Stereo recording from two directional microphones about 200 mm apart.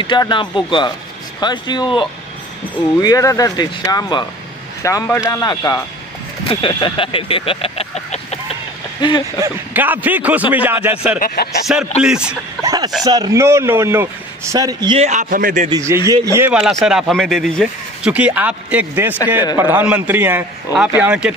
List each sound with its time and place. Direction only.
0.0 s speech: 25° left (ahead or behind)
6.5 s vehicle: 25° left (ahead or behind)
9.4 s speech: 10° right (ahead or behind)
11.1 s speech: 50° left (ahead or behind)
12.0 s speech: 5° right (ahead or behind)
12.6 s speech: 20° right (ahead or behind)
15.0 s a man's voice: 40° right (ahead or behind)
15.7 s speech: 15° right (ahead or behind)